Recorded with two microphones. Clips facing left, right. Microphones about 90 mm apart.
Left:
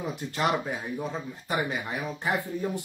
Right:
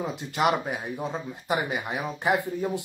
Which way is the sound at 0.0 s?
20° right (ahead or behind).